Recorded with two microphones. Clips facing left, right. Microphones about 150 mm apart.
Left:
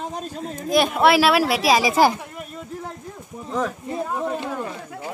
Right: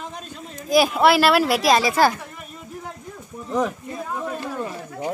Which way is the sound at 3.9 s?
25° left (ahead or behind).